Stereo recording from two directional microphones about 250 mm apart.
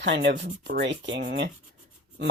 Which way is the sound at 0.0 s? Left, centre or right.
Right.